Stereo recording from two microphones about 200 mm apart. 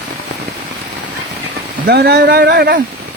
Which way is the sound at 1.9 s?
55° right (ahead or behind).